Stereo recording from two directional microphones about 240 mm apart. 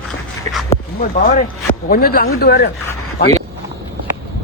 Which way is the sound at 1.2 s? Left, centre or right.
Left.